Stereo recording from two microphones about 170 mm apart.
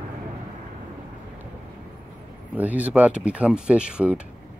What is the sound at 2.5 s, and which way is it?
Speech, 10° right (ahead or behind).